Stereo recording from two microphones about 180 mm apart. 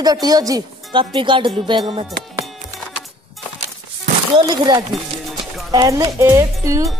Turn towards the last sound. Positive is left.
turn(degrees=-15)  # may be behind; listen again after turning